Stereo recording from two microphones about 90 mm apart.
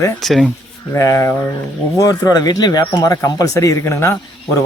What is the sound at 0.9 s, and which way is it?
Speech, 35° left (ahead or behind).